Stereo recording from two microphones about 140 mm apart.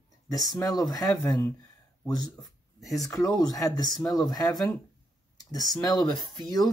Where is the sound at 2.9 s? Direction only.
25° left (ahead or behind).